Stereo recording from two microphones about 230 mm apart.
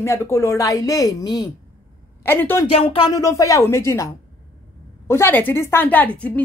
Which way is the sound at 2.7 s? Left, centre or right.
Left.